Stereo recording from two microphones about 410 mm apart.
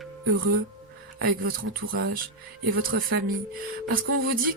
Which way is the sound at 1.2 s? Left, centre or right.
Right.